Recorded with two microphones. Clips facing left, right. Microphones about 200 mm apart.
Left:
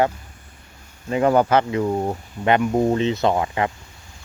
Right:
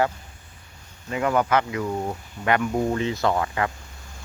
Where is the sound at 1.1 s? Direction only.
30° left (ahead or behind).